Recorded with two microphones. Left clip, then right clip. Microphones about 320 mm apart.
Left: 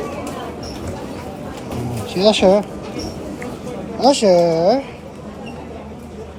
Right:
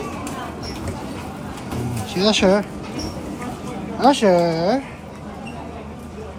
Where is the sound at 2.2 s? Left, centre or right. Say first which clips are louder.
Left 4 dB; centre.